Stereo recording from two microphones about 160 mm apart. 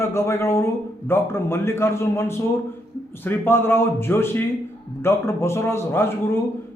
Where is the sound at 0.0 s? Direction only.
15° left (ahead or behind).